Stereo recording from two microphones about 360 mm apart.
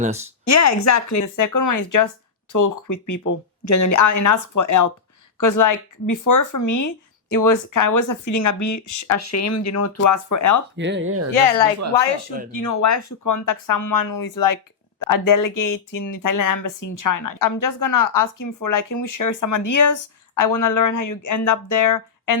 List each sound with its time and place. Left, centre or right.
0.4 s speech: left
10.8 s speech: right
12.5 s speech: left